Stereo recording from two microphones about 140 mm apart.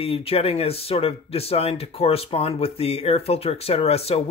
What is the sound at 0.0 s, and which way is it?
Speech, 45° left (ahead or behind).